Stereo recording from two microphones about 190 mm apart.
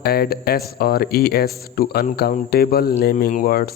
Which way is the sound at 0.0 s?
55° left (ahead or behind).